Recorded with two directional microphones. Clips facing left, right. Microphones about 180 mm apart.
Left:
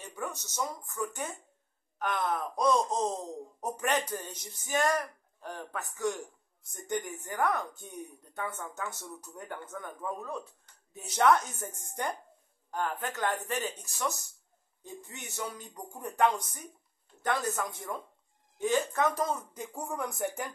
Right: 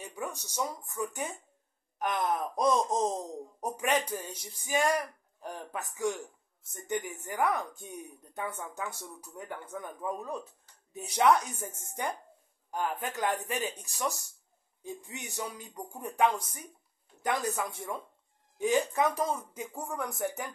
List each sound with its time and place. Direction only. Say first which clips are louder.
0.0 s speech: even; 15° right (ahead or behind)
9.3 s speech: right 1 dB; centre (ahead or behind)
9.9 s speech: right 1 dB; 15° right (ahead or behind); by 20.5 s centre (ahead or behind)